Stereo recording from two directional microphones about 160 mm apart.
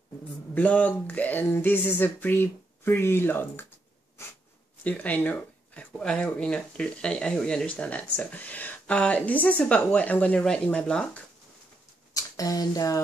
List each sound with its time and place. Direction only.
0.6 s speech: 10° left (ahead or behind)
4.2 s snort: 15° left (ahead or behind)
4.8 s speech: 10° left (ahead or behind)
12.1 s speech: 20° left (ahead or behind)